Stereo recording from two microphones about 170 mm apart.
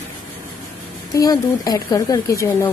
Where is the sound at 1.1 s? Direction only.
20° left (ahead or behind).